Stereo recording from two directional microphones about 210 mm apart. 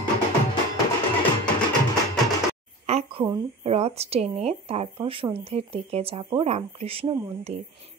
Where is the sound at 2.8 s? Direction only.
30° right (ahead or behind).